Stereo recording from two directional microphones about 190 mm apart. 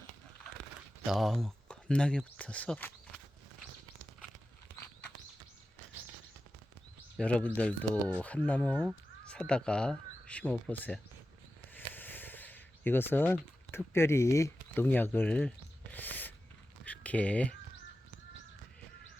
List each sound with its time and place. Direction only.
1.0 s speech: centre (ahead or behind)
7.2 s speech: 5° left (ahead or behind)
11.7 s a sound: 10° left (ahead or behind)